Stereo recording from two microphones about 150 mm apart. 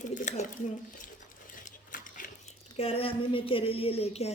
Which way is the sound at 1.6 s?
60° left (ahead or behind).